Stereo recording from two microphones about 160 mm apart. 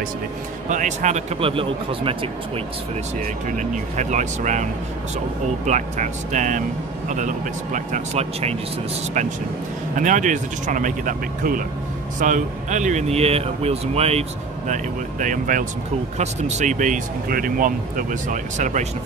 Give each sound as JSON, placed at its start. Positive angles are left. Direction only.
{"t": 0.7, "sound": "speech", "side_deg": -50}
{"t": 3.4, "sound": "speech", "side_deg": -50}
{"t": 5.7, "sound": "speech", "side_deg": -50}
{"t": 9.9, "sound": "speech", "side_deg": -50}
{"t": 14.7, "sound": "speech", "side_deg": -55}